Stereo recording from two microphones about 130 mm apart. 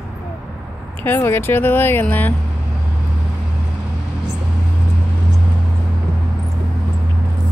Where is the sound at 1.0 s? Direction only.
15° left (ahead or behind).